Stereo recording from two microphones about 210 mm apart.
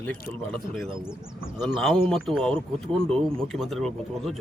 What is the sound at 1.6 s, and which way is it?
Speech, centre (ahead or behind).